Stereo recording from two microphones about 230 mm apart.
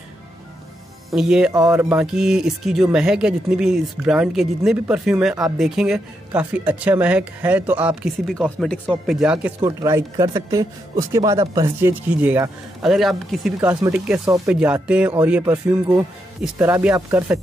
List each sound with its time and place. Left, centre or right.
1.1 s speech: centre
1.5 s speech: centre
9.6 s speech: centre